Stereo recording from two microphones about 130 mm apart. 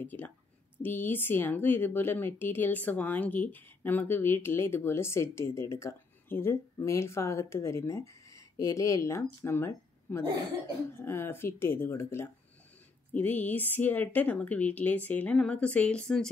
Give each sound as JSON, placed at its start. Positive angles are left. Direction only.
{"t": 0.0, "sound": "speech", "side_deg": 15}